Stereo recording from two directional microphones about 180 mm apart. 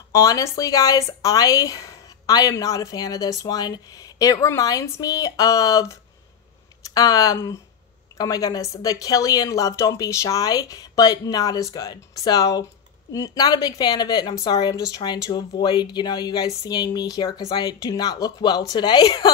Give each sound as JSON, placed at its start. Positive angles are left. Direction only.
{"t": 0.1, "sound": "speech", "side_deg": 20}